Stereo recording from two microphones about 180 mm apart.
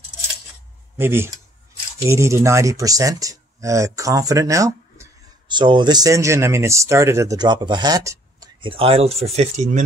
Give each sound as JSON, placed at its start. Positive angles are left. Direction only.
{"t": 0.9, "sound": "speech", "side_deg": -15}